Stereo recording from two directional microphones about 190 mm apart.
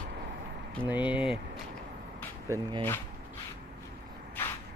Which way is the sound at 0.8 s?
10° right (ahead or behind).